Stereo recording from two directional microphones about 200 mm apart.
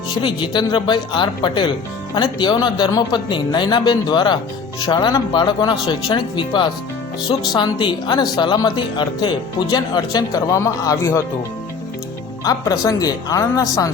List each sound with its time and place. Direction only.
0.1 s speech: 25° left (ahead or behind)
12.5 s speech: 20° left (ahead or behind)